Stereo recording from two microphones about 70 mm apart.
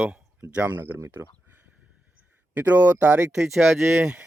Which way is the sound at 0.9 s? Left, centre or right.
Right.